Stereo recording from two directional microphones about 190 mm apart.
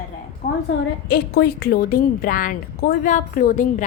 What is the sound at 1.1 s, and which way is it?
A woman's voice, 55° left (ahead or behind).